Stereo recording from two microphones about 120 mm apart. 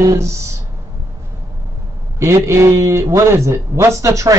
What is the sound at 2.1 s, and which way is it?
Speech, 25° right (ahead or behind).